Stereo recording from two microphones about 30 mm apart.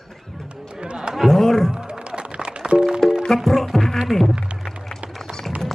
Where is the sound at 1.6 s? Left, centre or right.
Right.